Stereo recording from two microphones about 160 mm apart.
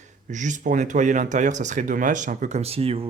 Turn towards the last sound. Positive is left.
turn(degrees=-35)  # may be behind; listen again after turning